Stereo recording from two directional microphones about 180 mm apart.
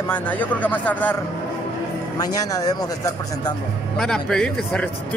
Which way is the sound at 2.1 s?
20° left (ahead or behind).